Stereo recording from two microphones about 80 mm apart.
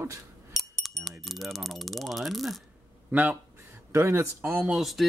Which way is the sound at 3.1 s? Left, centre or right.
Right.